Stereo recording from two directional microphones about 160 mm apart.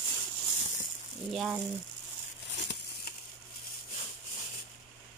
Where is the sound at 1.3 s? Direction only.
Centre (ahead or behind).